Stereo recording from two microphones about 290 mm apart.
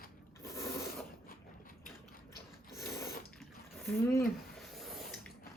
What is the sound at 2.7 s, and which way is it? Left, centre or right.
Ratchet, centre.